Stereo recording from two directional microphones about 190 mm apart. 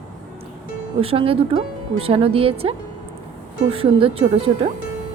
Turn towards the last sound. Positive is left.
turn(degrees=-30)  # may be behind; listen again after turning